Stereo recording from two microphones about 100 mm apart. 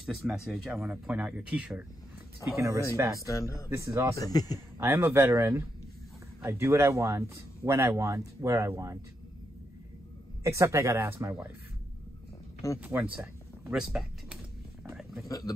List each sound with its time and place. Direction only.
0.0 s speech: 5° right (ahead or behind)
2.5 s speech: 30° right (ahead or behind)
3.2 s speech: 30° left (ahead or behind)
3.7 s speech: 30° right (ahead or behind)
4.1 s speech: 40° left (ahead or behind)
4.7 s speech: 30° right (ahead or behind)
10.4 s speech: 30° right (ahead or behind)
12.6 s speech: 35° left (ahead or behind)
13.1 s speech: 15° right (ahead or behind)
15.2 s speech: 35° left (ahead or behind)